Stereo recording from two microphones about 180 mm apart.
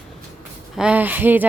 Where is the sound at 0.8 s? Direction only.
10° right (ahead or behind).